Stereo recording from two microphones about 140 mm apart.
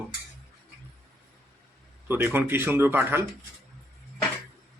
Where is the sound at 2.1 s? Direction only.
15° right (ahead or behind).